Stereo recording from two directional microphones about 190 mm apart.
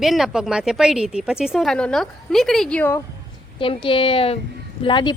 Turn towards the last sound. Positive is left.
turn(degrees=25)  # may be behind; listen again after turning